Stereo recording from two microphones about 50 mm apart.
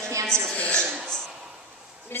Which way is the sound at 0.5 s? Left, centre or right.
Left.